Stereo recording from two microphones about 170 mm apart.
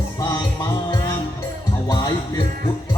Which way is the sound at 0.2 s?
20° left (ahead or behind).